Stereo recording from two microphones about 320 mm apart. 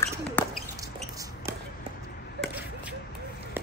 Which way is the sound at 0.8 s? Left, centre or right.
Centre.